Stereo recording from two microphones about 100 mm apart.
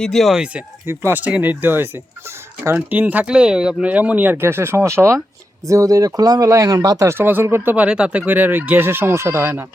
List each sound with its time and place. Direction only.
0.0 s speech: 5° left (ahead or behind)
0.9 s speech: 20° right (ahead or behind); by 7.1 s 35° right (ahead or behind)
7.1 s speech: 20° right (ahead or behind)
7.9 s speech: 10° right (ahead or behind)